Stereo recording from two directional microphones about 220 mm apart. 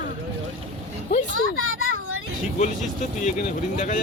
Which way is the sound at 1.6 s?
70° right (ahead or behind).